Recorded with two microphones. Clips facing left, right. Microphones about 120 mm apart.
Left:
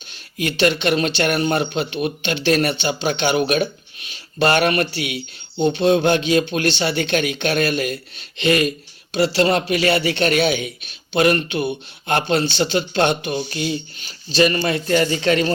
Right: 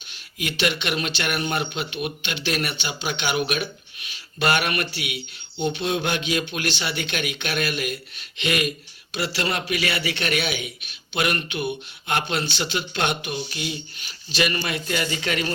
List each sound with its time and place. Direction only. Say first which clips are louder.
0.3 s a man's voice: left 7 dB; 35° left (ahead or behind)